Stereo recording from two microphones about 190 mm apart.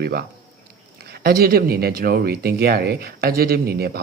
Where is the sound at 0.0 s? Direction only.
55° right (ahead or behind).